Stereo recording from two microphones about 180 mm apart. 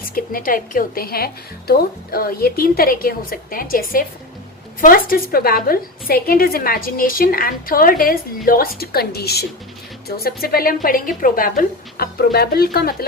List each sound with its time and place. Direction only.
0.1 s a woman's voice: 50° left (ahead or behind)